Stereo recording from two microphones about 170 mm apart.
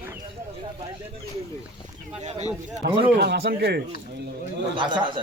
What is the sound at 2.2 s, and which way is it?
Speech, 40° right (ahead or behind).